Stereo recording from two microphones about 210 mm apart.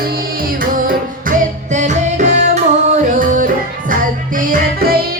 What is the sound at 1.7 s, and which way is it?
Music, 35° right (ahead or behind).